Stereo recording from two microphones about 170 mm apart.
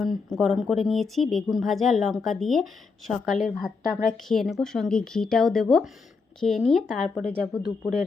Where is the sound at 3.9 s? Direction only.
55° left (ahead or behind).